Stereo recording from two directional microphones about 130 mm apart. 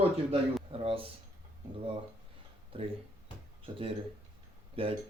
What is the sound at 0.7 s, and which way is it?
Speech, 45° right (ahead or behind).